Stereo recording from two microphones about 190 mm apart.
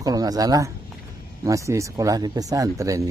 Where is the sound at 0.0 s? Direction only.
20° right (ahead or behind).